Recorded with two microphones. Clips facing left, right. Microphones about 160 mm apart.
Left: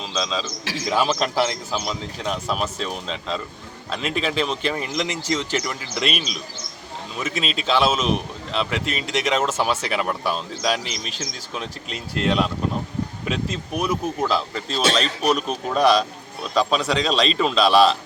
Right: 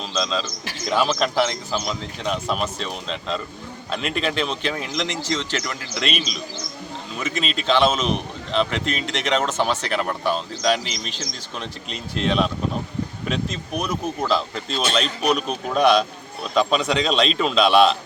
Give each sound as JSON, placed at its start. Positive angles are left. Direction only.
{"t": 0.0, "sound": "a man's voice", "side_deg": 5}
{"t": 0.6, "sound": "speech", "side_deg": 90}
{"t": 0.9, "sound": "a man's voice", "side_deg": 0}